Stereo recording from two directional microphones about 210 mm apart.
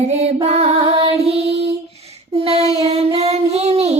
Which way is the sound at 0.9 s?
30° right (ahead or behind).